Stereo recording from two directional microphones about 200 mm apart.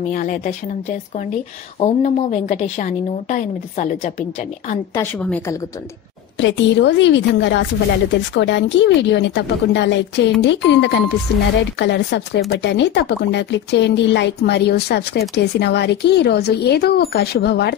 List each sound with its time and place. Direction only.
0.1 s a woman's voice: 45° left (ahead or behind)
5.2 s a woman's voice: 5° left (ahead or behind)
6.4 s speech: 60° left (ahead or behind)